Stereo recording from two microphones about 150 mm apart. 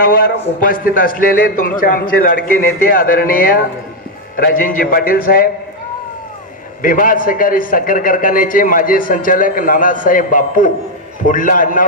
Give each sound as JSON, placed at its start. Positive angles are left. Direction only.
{"t": 0.0, "sound": "a man's voice", "side_deg": 75}
{"t": 6.8, "sound": "a man's voice", "side_deg": 65}